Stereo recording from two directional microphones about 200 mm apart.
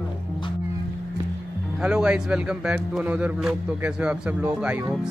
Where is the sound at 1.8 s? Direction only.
5° right (ahead or behind).